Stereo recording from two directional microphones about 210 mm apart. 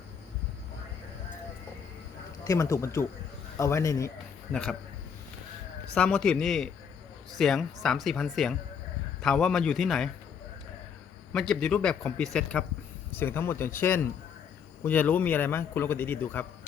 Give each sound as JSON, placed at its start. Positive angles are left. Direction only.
{"t": 2.4, "sound": "a man's voice", "side_deg": 15}
{"t": 4.5, "sound": "a man's voice", "side_deg": 5}
{"t": 5.9, "sound": "a man's voice", "side_deg": 5}
{"t": 11.3, "sound": "a man's voice", "side_deg": 5}